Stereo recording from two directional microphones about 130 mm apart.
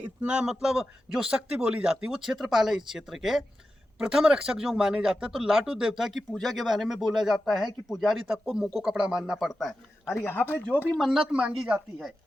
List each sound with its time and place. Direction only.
0.0 s speech: 10° right (ahead or behind)
10.1 s speech: 15° left (ahead or behind)
10.8 s speech: centre (ahead or behind)